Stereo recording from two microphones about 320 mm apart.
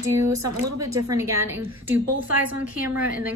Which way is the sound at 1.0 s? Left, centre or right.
Centre.